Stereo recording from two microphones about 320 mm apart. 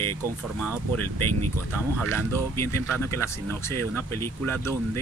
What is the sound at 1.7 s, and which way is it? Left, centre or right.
Speech, centre.